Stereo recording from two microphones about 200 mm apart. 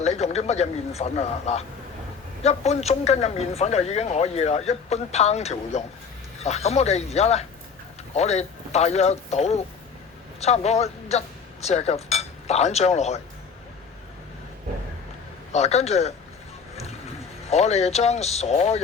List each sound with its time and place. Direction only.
0.0 s a man's voice: 35° left (ahead or behind)
15.5 s a man's voice: 35° left (ahead or behind)
17.5 s a man's voice: 35° left (ahead or behind)